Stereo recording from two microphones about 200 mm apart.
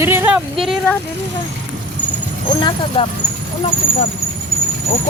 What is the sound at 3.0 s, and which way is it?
Speech, 30° left (ahead or behind).